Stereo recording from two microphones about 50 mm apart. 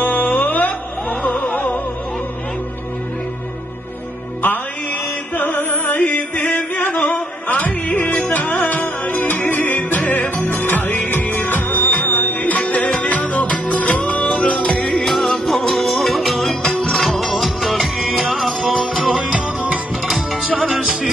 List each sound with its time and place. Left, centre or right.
0.0 s music: left
5.3 s music: left
14.9 s music: centre
20.4 s music: centre
20.8 s music: centre